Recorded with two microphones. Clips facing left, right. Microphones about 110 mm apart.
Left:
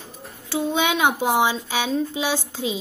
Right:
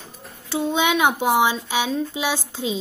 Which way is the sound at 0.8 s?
20° left (ahead or behind).